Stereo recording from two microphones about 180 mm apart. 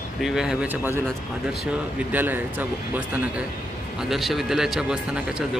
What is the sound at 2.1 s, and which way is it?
Speech, 10° right (ahead or behind).